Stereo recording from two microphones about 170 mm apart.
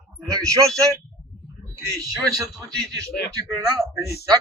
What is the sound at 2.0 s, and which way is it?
Speech, 20° right (ahead or behind).